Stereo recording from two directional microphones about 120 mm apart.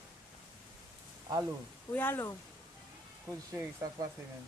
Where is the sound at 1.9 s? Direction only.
15° left (ahead or behind).